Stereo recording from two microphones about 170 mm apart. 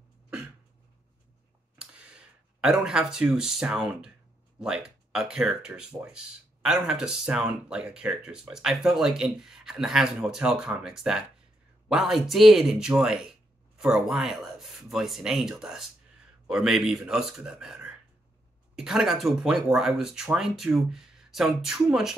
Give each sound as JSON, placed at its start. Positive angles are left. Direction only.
{"t": 1.8, "sound": "speech", "side_deg": -5}